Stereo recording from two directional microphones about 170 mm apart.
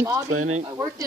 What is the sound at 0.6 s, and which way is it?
Speech, 20° right (ahead or behind).